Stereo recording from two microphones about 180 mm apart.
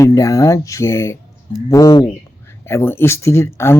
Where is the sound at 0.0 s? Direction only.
20° left (ahead or behind).